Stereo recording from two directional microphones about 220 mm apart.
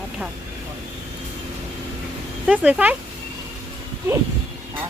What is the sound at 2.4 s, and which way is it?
Speech, 5° right (ahead or behind).